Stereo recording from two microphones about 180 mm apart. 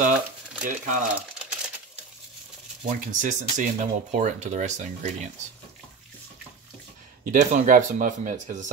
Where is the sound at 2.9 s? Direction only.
45° right (ahead or behind).